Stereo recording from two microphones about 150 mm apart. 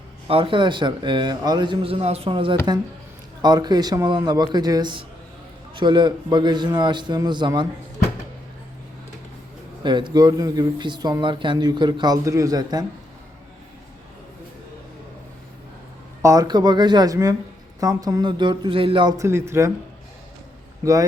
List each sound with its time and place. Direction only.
0.3 s a man's voice: 35° right (ahead or behind)
9.8 s speech: 30° right (ahead or behind)
16.2 s a man's voice: 25° right (ahead or behind)
19.1 s speech: 20° right (ahead or behind)
20.8 s speech: 20° right (ahead or behind)